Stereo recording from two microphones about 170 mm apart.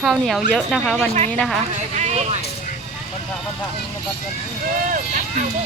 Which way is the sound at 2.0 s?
40° right (ahead or behind).